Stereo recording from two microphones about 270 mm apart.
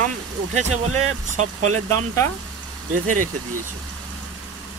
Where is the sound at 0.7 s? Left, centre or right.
Right.